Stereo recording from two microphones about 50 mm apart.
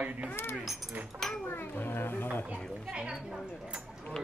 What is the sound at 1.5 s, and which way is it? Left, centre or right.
Speech, left.